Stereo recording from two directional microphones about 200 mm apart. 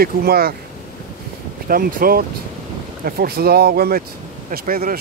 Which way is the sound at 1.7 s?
45° right (ahead or behind).